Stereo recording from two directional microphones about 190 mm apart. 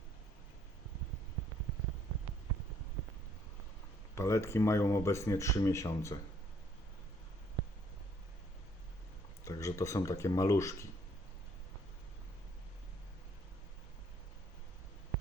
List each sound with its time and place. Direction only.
4.1 s speech: 15° left (ahead or behind)
9.4 s speech: 15° left (ahead or behind)